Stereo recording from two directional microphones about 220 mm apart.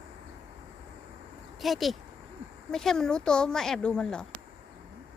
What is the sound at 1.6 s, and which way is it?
Speech, centre (ahead or behind).